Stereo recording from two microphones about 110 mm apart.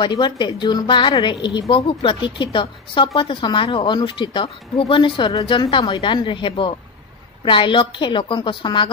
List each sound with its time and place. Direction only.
0.0 s a woman's voice: 45° left (ahead or behind)